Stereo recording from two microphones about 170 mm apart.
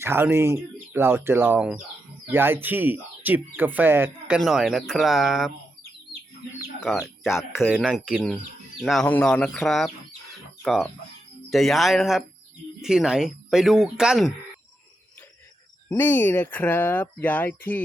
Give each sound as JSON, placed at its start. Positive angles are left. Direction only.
{"t": 0.0, "sound": "speech", "side_deg": -15}
{"t": 4.4, "sound": "speech", "side_deg": 0}
{"t": 6.7, "sound": "speech", "side_deg": 0}
{"t": 7.3, "sound": "speech", "side_deg": 15}
{"t": 7.7, "sound": "speech", "side_deg": -5}
{"t": 16.0, "sound": "speech", "side_deg": 10}